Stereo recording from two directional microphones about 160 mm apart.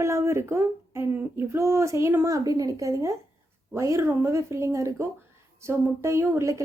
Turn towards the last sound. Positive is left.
turn(degrees=-20)  # may be behind; listen again after turning